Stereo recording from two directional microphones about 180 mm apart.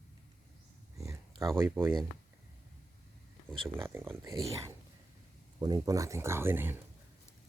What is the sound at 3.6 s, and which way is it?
Speech, 15° right (ahead or behind).